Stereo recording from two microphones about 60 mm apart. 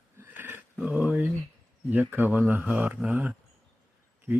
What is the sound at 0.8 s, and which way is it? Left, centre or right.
Speech, right.